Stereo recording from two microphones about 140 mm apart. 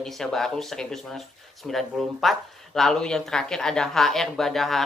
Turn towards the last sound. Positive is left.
turn(degrees=0)  # may be behind; listen again after turning